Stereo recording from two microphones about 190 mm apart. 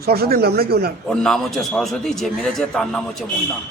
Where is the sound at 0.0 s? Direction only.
55° right (ahead or behind).